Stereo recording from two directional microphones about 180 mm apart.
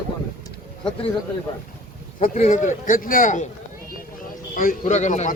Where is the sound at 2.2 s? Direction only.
45° left (ahead or behind).